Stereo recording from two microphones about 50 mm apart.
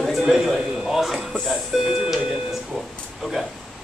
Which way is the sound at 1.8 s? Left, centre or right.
Centre.